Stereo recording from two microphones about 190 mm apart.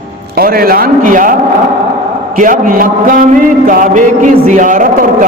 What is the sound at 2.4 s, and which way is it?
Speech, 45° right (ahead or behind).